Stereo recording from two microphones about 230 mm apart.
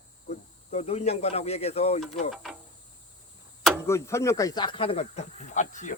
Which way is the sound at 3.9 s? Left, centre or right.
Centre.